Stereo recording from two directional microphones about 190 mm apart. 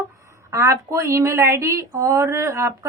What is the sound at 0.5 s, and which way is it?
A woman's voice, 15° right (ahead or behind).